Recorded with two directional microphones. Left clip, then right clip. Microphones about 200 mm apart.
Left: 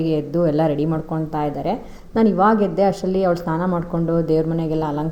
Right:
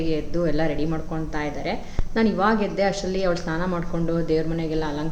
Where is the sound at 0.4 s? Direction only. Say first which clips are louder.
Left 6 dB; 40° left (ahead or behind).